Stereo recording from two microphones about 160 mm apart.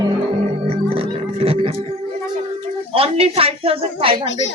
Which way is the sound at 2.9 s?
35° right (ahead or behind).